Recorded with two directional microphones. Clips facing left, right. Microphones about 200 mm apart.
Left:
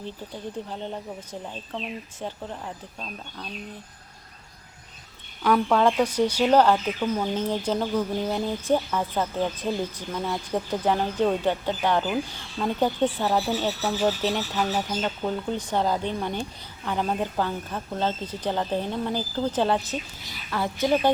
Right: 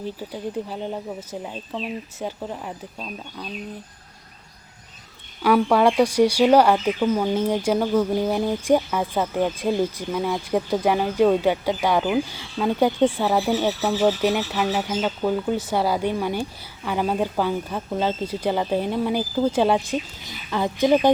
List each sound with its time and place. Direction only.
2.1 s speech: 10° right (ahead or behind)
5.4 s speech: 10° right (ahead or behind)